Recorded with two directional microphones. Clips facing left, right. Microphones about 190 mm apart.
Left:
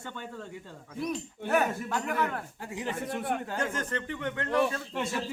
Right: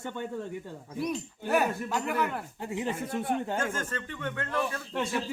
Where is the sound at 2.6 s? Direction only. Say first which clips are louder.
Right 3 dB; 25° right (ahead or behind).